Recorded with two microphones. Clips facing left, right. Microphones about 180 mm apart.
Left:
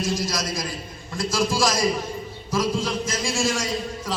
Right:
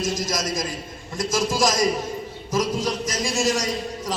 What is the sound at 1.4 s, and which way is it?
A man's voice, 20° right (ahead or behind).